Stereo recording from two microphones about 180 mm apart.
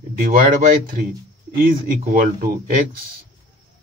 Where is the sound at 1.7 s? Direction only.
50° right (ahead or behind).